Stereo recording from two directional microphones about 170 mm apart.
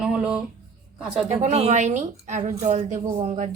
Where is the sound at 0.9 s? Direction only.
5° right (ahead or behind).